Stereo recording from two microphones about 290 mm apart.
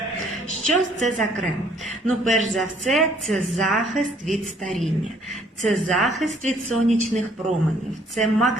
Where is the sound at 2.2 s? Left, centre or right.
Right.